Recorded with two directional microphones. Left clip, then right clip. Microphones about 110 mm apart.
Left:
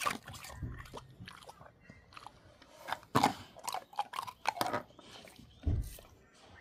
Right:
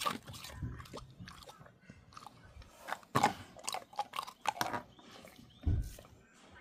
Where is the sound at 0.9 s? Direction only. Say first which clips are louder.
Left 1 dB; 20° right (ahead or behind).